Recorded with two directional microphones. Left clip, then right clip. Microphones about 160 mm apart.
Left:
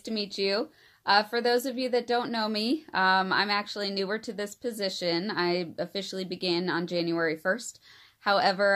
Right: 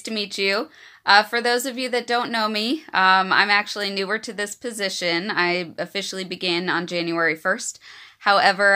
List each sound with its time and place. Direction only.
0.0 s speech: 15° right (ahead or behind)